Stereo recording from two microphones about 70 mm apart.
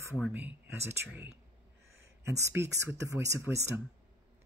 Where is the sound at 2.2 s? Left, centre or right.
Right.